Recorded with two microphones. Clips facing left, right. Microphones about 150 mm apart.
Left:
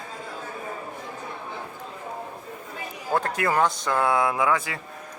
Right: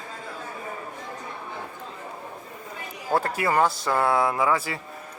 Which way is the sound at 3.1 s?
5° right (ahead or behind).